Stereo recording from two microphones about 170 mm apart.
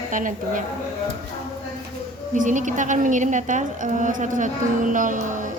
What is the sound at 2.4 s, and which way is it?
A woman's voice, 50° right (ahead or behind).